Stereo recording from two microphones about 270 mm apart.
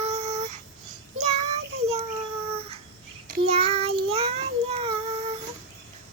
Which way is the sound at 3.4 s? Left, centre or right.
Right.